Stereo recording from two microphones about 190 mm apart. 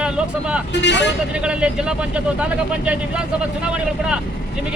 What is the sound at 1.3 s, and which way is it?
Speech, 5° right (ahead or behind).